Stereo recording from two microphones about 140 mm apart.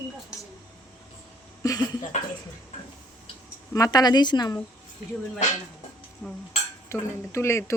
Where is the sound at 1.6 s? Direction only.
25° left (ahead or behind).